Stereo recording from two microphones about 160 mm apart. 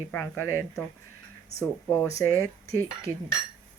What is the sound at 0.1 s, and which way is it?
A woman's voice, 15° left (ahead or behind).